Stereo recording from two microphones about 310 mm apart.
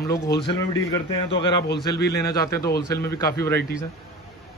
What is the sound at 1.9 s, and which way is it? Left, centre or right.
Speech, centre.